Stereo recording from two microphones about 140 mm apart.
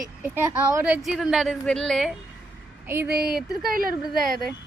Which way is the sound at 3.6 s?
90° right.